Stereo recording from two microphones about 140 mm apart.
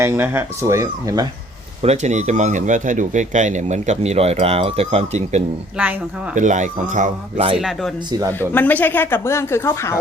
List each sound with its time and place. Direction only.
0.0 s speech: 20° right (ahead or behind)
1.8 s speech: 50° right (ahead or behind)
5.7 s speech: 10° right (ahead or behind)
6.3 s speech: 60° right (ahead or behind)
7.5 s speech: 5° right (ahead or behind)
8.3 s speech: 15° left (ahead or behind)